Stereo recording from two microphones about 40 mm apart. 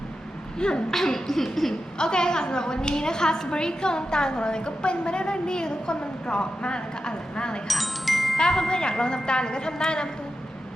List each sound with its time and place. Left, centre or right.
0.6 s a woman's voice: left
0.9 s a sound: centre
2.0 s a woman's voice: left
7.7 s chime: centre
8.4 s a woman's voice: centre